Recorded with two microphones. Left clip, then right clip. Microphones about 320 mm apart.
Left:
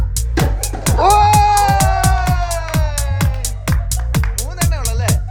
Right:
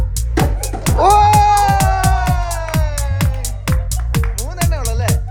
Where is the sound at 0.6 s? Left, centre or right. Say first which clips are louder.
Even; centre.